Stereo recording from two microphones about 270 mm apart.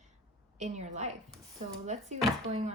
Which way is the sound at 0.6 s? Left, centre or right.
Right.